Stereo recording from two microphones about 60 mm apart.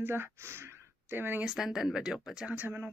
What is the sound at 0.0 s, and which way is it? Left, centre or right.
Speech, right.